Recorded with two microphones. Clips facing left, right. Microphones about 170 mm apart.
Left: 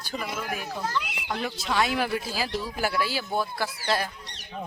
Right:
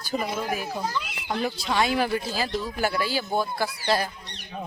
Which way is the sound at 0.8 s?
10° right (ahead or behind).